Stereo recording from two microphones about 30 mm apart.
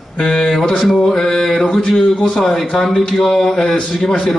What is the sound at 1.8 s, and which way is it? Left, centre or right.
Speech, left.